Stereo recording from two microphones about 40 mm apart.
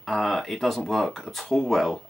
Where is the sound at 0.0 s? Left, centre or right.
Centre.